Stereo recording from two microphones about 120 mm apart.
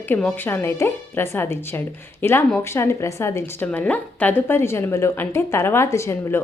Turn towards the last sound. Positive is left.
turn(degrees=25)  # may be behind; listen again after turning